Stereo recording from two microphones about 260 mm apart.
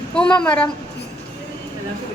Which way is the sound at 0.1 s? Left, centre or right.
Centre.